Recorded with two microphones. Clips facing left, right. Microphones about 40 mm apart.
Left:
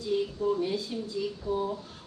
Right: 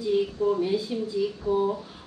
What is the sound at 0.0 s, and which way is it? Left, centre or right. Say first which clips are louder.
A man's voice: right 4 dB; centre.